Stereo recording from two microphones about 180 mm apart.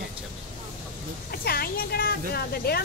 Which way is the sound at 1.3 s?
55° left (ahead or behind).